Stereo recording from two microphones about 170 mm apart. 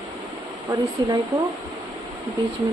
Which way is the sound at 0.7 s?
25° right (ahead or behind).